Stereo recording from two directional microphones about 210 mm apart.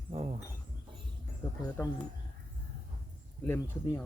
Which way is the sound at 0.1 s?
30° right (ahead or behind).